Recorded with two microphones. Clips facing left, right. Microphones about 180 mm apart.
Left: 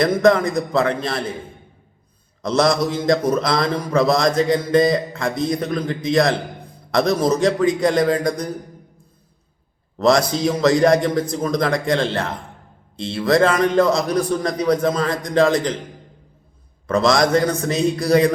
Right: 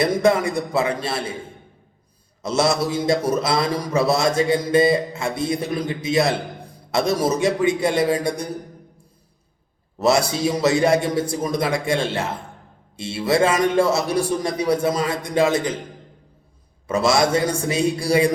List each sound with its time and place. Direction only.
0.0 s a man's voice: 10° right (ahead or behind)
2.4 s a man's voice: 5° right (ahead or behind)
10.0 s a man's voice: 10° right (ahead or behind)
16.8 s a man's voice: 10° right (ahead or behind)